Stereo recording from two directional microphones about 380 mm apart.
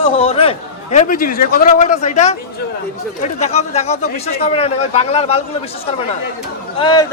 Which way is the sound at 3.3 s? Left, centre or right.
Centre.